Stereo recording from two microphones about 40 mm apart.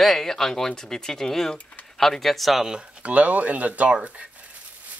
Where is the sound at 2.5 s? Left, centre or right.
Centre.